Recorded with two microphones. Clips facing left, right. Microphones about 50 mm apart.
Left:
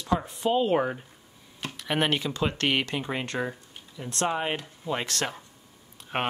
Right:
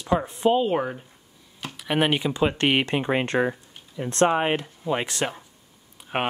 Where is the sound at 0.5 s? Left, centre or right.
Centre.